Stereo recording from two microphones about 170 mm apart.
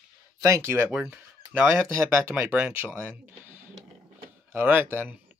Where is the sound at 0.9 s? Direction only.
5° right (ahead or behind).